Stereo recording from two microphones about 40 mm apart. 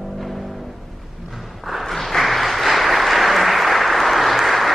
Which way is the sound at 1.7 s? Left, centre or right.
Centre.